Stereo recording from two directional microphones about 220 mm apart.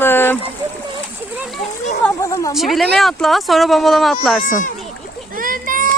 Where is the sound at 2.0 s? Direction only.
15° left (ahead or behind).